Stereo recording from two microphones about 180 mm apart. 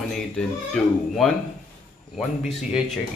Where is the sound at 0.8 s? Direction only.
5° left (ahead or behind).